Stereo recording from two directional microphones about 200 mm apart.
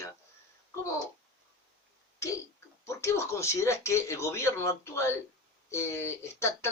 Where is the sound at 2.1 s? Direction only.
15° left (ahead or behind).